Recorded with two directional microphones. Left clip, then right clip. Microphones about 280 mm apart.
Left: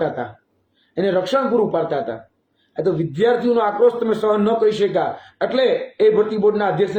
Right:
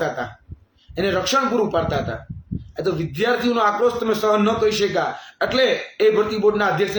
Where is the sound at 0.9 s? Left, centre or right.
Centre.